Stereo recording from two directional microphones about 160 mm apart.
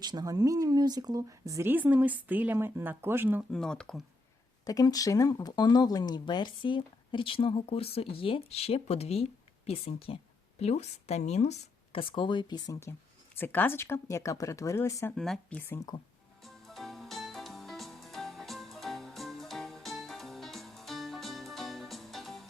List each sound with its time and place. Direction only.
0.0 s speech: 25° right (ahead or behind)
3.5 s speech: 5° left (ahead or behind)
4.6 s speech: 25° left (ahead or behind)
13.4 s speech: 10° left (ahead or behind)
15.1 s speech: 5° left (ahead or behind)
16.4 s music: centre (ahead or behind)